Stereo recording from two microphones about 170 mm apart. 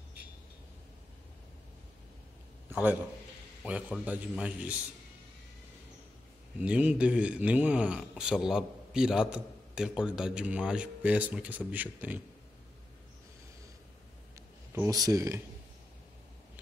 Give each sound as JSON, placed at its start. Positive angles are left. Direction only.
{"t": 2.7, "sound": "a man's voice", "side_deg": -10}
{"t": 4.0, "sound": "a man's voice", "side_deg": -10}
{"t": 6.6, "sound": "a man's voice", "side_deg": -5}
{"t": 14.8, "sound": "speech", "side_deg": -20}